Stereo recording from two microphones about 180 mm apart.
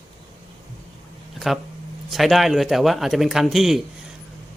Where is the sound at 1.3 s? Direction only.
Centre (ahead or behind).